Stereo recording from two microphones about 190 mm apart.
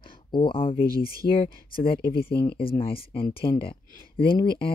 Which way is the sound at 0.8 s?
50° left (ahead or behind).